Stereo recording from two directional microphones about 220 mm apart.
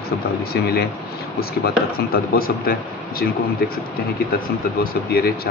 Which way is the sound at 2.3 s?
45° left (ahead or behind).